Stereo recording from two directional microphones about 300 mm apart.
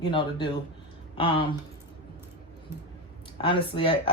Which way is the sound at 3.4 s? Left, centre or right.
Centre.